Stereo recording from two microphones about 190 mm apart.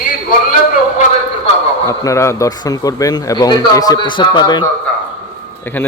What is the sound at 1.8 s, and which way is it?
A man's voice, 15° left (ahead or behind).